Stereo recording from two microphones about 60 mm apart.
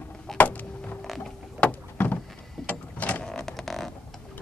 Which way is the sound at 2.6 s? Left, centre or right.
Left.